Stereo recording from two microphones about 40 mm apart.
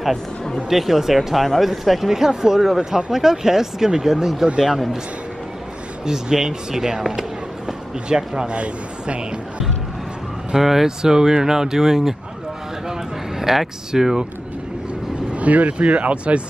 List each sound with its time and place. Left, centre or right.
0.7 s speech: centre
6.0 s speech: centre
7.1 s a sound: centre
8.5 s speech: right
10.5 s speech: centre
13.4 s speech: centre
15.3 s speech: right